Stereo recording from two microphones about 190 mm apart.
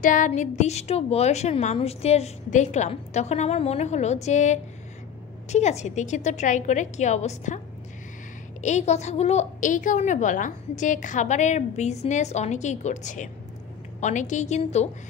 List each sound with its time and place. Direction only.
0.0 s a woman's voice: 40° left (ahead or behind)